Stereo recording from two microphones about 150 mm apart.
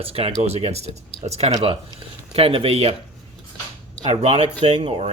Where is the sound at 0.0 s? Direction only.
40° right (ahead or behind).